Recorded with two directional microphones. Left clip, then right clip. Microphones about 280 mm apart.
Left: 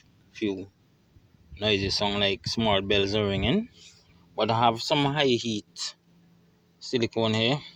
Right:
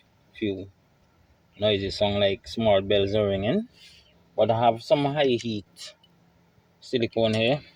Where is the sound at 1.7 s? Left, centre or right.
Left.